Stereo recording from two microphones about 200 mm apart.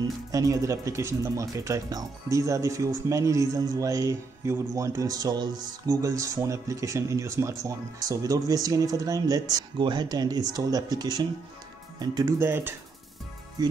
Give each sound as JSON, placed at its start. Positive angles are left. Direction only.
{"t": 0.0, "sound": "speech", "side_deg": -15}